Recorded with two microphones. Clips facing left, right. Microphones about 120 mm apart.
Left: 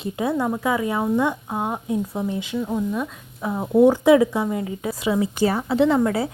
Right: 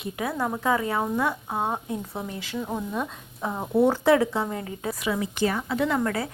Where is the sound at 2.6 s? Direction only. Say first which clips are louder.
Left 5 dB; 10° right (ahead or behind).